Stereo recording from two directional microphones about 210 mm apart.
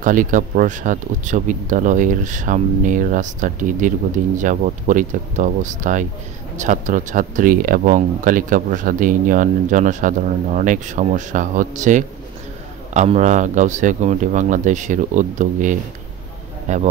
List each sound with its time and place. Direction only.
0.0 s speech: 40° right (ahead or behind)